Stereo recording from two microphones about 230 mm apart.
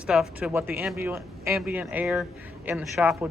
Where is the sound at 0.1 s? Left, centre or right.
Centre.